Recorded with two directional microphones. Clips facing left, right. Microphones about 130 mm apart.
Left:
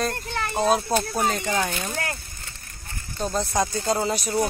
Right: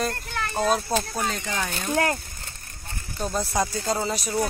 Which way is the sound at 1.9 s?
50° right (ahead or behind).